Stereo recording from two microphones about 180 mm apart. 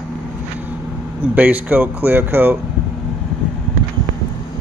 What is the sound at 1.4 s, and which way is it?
Speech, 10° right (ahead or behind).